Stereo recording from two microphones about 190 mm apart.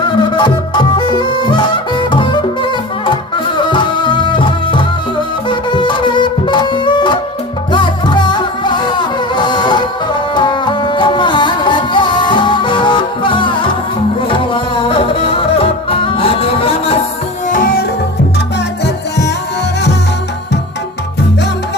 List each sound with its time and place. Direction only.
0.0 s fowl: 25° left (ahead or behind)
3.1 s music: 25° left (ahead or behind)
17.5 s music: 45° left (ahead or behind)